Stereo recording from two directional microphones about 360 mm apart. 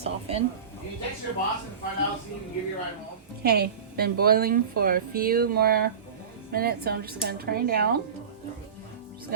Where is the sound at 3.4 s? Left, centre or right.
Right.